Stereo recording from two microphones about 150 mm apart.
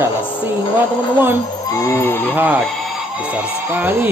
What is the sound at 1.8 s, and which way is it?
Fowl, 15° left (ahead or behind).